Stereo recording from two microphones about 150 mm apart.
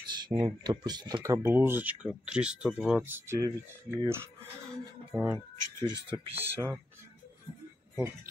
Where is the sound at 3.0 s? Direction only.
15° right (ahead or behind).